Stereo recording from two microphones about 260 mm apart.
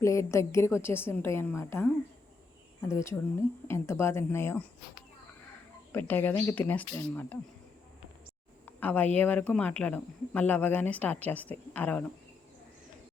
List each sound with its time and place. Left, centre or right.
0.0 s speech: centre
5.9 s speech: centre
8.6 s speech: centre